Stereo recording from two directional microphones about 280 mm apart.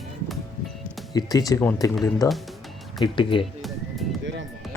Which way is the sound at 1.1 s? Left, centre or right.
Centre.